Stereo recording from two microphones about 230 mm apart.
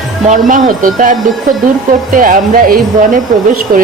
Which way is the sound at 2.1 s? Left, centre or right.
Right.